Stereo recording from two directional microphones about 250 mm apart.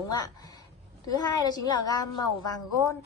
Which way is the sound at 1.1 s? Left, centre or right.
Centre.